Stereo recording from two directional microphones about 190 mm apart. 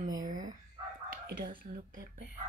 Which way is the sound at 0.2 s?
45° right (ahead or behind).